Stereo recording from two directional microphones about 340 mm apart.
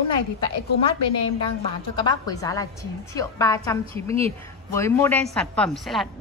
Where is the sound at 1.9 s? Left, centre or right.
Centre.